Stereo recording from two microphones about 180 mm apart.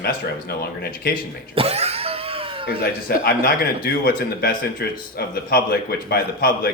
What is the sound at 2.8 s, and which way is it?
A man's voice, 55° left (ahead or behind).